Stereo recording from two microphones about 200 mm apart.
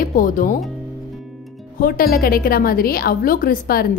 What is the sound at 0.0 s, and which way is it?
Speech, 45° left (ahead or behind).